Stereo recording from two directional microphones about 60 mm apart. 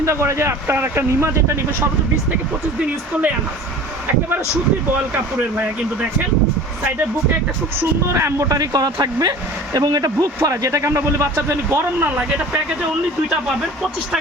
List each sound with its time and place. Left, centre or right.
0.0 s speech: right
4.9 s speech: right
7.8 s speech: right
8.4 s speech: right
11.9 s speech: right